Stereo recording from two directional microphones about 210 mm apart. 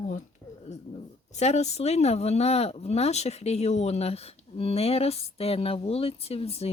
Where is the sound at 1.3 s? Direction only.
30° left (ahead or behind).